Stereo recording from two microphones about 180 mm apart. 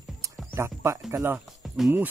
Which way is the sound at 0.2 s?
15° right (ahead or behind).